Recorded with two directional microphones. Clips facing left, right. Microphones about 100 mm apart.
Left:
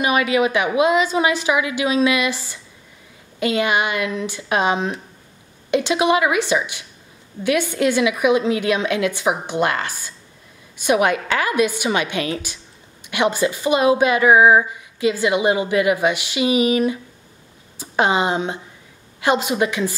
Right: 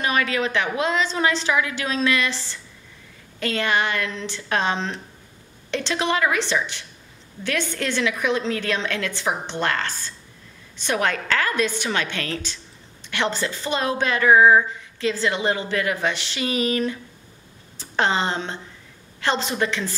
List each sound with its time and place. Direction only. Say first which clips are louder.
0.0 s a woman's voice: left 5 dB; 10° left (ahead or behind)